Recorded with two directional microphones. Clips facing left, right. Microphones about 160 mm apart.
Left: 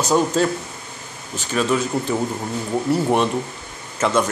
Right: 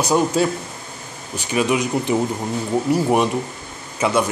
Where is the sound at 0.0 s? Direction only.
10° right (ahead or behind).